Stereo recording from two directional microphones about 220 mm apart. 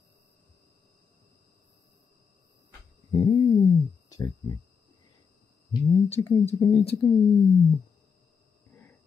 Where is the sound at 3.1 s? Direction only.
15° left (ahead or behind).